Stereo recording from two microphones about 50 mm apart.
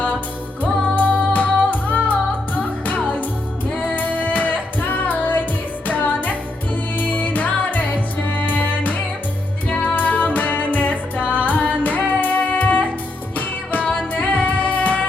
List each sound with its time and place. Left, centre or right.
0.6 s music: left